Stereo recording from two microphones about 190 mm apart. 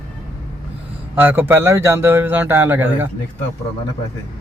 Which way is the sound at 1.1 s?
10° right (ahead or behind).